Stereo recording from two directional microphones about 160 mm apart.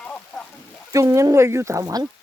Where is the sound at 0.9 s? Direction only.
20° right (ahead or behind).